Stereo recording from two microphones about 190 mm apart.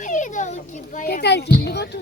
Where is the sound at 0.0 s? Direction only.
40° left (ahead or behind).